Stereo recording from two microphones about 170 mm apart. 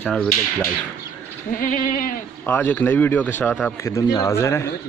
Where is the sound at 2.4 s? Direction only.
10° left (ahead or behind).